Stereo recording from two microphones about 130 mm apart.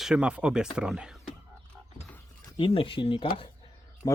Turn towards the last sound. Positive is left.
turn(degrees=30)  # may be behind; listen again after turning